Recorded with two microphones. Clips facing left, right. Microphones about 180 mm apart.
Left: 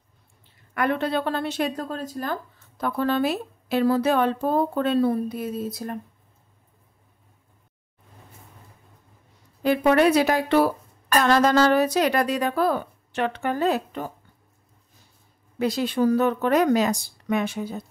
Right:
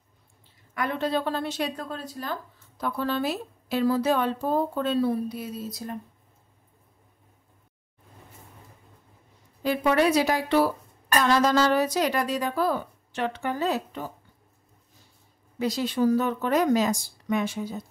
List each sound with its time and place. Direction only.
0.7 s speech: 60° left (ahead or behind)
1.8 s speech: 40° left (ahead or behind)
9.6 s speech: 60° left (ahead or behind)
15.6 s speech: 60° left (ahead or behind)